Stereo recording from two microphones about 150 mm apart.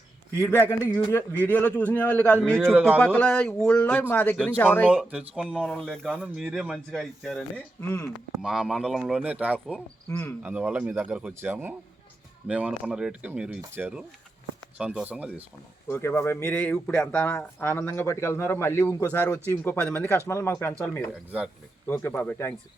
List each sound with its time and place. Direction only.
0.3 s speech: 15° left (ahead or behind)
5.1 s speech: 5° right (ahead or behind)
7.5 s speech: 15° left (ahead or behind)
8.4 s speech: 5° right (ahead or behind)
9.7 s speech: 15° left (ahead or behind)
10.4 s speech: 10° right (ahead or behind)
15.9 s speech: 15° left (ahead or behind)